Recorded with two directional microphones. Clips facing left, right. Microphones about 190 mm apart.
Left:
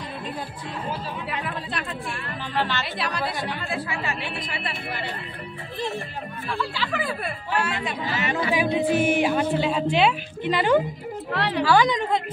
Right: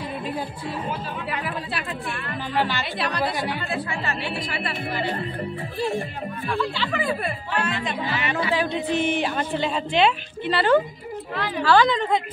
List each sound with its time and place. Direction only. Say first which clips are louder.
1.3 s speech: right 2 dB; 5° right (ahead or behind)
2.8 s speech: right 2 dB; centre (ahead or behind)
3.3 s speech: right 3 dB; 10° right (ahead or behind)
3.6 s speech: right 1 dB; centre (ahead or behind)
5.8 s speech: right 4 dB; 10° right (ahead or behind)
6.8 s a woman's voice: right 3 dB; 5° left (ahead or behind)
11.3 s a woman's voice: left 3 dB; 75° left (ahead or behind)
11.6 s a woman's voice: right 2 dB; 15° left (ahead or behind)